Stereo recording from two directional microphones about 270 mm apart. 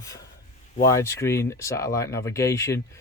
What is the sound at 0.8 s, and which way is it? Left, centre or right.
Speech, centre.